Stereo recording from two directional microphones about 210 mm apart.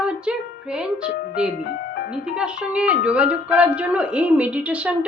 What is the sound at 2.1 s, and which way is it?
Speech, 5° right (ahead or behind).